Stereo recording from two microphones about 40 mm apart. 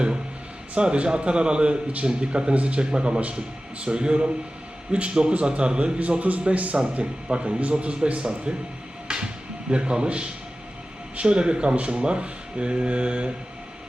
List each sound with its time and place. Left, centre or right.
0.7 s a man's voice: right
8.2 s speech: right
9.0 s a sound: right
11.2 s speech: right